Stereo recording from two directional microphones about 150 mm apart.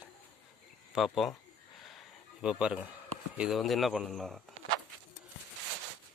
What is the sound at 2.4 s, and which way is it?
Speech, 5° right (ahead or behind).